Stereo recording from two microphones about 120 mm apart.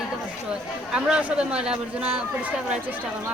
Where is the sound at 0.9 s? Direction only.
10° right (ahead or behind).